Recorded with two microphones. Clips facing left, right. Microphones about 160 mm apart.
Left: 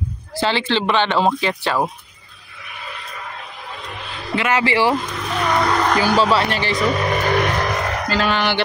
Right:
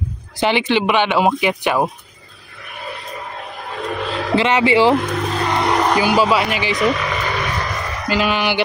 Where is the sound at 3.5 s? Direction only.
50° right (ahead or behind).